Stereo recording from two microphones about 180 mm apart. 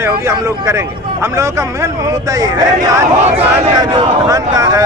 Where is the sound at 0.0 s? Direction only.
15° right (ahead or behind).